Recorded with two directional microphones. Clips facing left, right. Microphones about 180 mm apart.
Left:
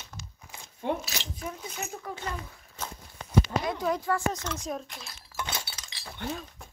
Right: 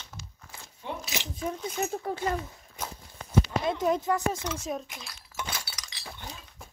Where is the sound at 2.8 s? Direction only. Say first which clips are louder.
Right 1 dB; 10° right (ahead or behind).